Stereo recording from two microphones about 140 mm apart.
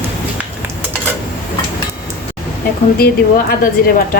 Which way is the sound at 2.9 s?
90° left.